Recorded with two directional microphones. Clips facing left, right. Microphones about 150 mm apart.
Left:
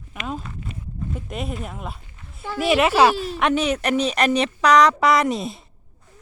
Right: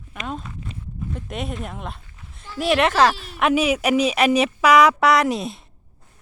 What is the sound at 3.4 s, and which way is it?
Speech, 5° right (ahead or behind).